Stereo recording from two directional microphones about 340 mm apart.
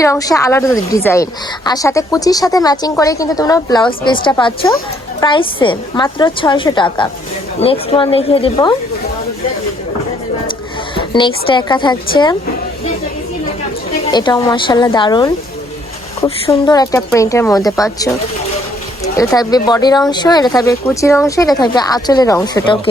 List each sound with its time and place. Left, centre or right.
0.0 s speech: centre
10.9 s speech: centre
14.0 s speech: centre
19.1 s speech: centre